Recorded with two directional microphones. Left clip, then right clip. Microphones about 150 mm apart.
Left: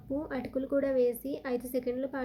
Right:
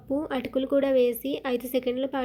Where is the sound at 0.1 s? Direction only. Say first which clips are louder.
Right 7 dB; 25° right (ahead or behind).